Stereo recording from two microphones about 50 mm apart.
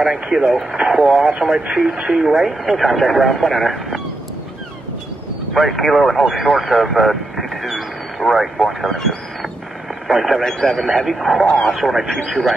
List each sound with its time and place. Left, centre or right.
0.0 s speech: centre
0.5 s speech: centre
0.7 s speech: centre
1.0 s speech: centre
1.5 s speech: centre
5.5 s speech: centre
10.0 s speech: centre
10.4 s speech: centre
11.1 s speech: centre
11.4 s speech: left
11.7 s speech: centre